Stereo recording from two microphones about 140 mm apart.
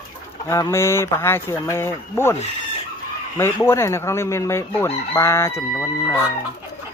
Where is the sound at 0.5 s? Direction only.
20° left (ahead or behind).